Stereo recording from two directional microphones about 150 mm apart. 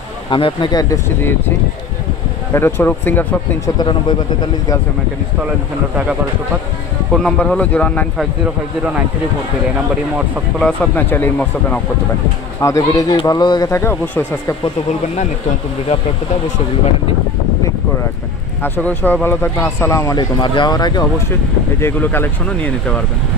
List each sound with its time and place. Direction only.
0.3 s speech: 35° left (ahead or behind)
0.8 s speech: 15° left (ahead or behind)
2.5 s speech: 15° left (ahead or behind)
3.7 s speech: 30° left (ahead or behind)
7.2 s speech: 5° left (ahead or behind)
10.6 s speech: 10° left (ahead or behind)
12.5 s speech: 20° left (ahead or behind)
13.1 s speech: 30° left (ahead or behind); by 14.2 s 15° left (ahead or behind)
18.6 s speech: 10° left (ahead or behind); by 21.0 s 30° left (ahead or behind)
21.7 s speech: 15° left (ahead or behind)